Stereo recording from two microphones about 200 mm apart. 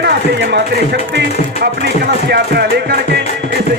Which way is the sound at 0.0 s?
55° right (ahead or behind).